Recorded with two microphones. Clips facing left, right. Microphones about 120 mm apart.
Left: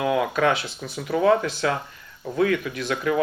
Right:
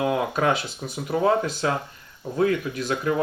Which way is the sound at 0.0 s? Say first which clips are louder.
Left 1 dB; 30° right (ahead or behind).